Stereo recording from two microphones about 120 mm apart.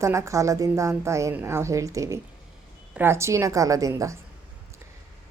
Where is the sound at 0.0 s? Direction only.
25° right (ahead or behind).